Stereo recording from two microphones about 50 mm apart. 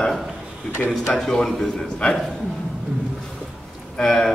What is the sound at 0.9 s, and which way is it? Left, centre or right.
Speech, centre.